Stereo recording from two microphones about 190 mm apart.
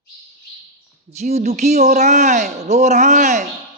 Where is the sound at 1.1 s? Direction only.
35° right (ahead or behind).